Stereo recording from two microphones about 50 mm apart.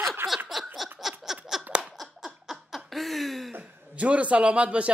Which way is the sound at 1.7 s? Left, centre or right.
Centre.